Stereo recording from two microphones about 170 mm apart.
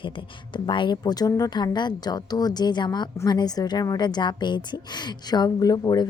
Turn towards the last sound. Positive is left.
turn(degrees=25)  # may be behind; listen again after turning